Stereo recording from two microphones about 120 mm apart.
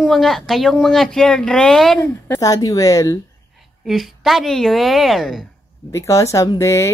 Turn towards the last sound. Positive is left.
turn(degrees=25)  # may be behind; listen again after turning